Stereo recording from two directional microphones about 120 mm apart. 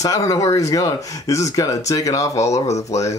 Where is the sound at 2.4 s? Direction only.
65° left (ahead or behind).